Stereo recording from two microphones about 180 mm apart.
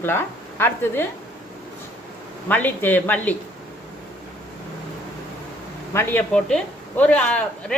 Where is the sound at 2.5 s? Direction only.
10° left (ahead or behind).